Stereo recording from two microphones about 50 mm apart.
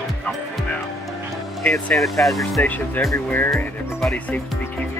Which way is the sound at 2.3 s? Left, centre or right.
Centre.